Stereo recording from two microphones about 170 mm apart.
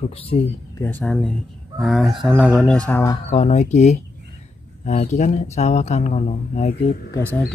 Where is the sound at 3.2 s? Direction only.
40° left (ahead or behind).